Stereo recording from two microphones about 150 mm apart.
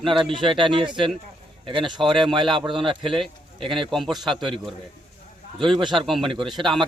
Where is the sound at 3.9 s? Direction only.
Centre (ahead or behind).